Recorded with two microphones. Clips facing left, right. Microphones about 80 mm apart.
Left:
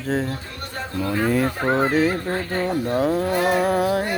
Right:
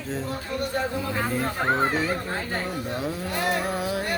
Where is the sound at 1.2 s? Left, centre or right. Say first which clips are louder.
Left 9 dB; left.